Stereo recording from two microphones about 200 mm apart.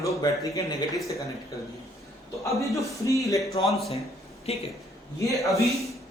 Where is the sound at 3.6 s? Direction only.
Centre (ahead or behind).